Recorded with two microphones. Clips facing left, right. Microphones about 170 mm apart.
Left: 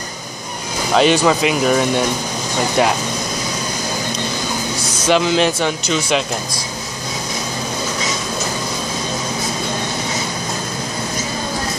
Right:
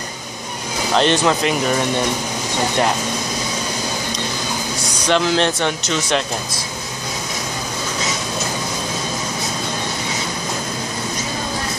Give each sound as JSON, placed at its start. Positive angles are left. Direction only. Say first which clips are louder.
{"t": 0.9, "sound": "speech", "louder": "left 3 dB", "side_deg": 5}
{"t": 5.0, "sound": "speech", "louder": "left 2 dB", "side_deg": 5}